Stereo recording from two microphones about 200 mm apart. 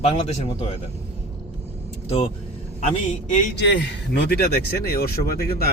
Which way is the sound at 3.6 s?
60° left (ahead or behind).